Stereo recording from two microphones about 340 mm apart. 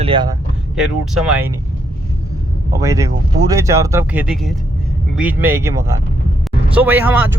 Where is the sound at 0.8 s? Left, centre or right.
Centre.